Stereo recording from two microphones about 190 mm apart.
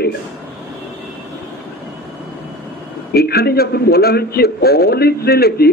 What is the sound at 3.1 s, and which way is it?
A man's voice, 55° left (ahead or behind).